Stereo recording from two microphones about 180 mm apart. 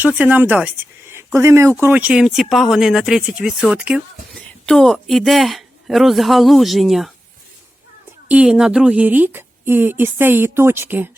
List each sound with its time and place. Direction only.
0.0 s a woman's voice: 10° right (ahead or behind)
8.3 s a woman's voice: 5° right (ahead or behind)